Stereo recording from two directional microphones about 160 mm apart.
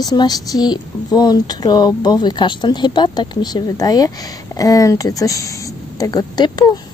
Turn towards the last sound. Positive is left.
turn(degrees=25)  # may be behind; listen again after turning